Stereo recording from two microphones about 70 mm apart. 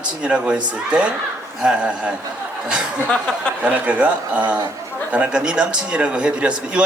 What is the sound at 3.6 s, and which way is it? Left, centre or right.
A man's voice, right.